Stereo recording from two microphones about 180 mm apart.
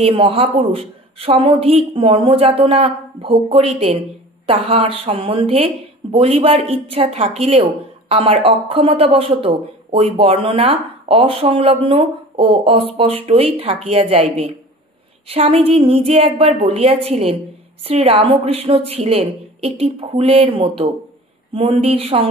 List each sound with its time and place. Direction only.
0.0 s speech: 30° right (ahead or behind)